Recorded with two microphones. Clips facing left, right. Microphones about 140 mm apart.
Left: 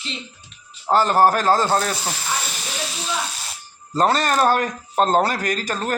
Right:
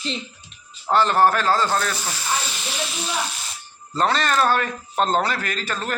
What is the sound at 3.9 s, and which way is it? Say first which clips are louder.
A man's voice: left 2 dB; 40° left (ahead or behind).